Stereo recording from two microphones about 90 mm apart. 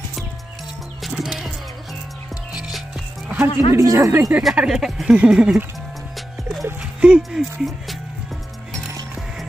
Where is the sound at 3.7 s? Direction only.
40° right (ahead or behind).